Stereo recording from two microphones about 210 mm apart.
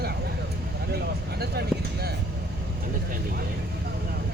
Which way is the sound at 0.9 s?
50° right (ahead or behind).